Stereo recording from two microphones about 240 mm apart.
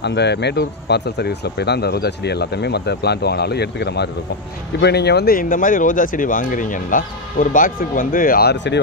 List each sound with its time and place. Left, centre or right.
0.0 s speech: left